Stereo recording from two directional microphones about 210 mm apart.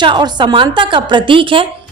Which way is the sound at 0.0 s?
20° right (ahead or behind).